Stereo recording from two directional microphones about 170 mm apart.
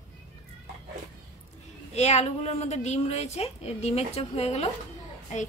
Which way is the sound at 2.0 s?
40° left (ahead or behind).